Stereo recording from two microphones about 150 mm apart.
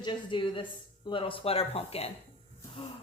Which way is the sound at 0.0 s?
30° left (ahead or behind).